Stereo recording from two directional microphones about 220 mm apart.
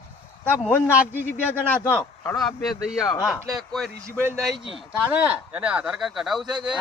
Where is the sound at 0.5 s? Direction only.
10° left (ahead or behind).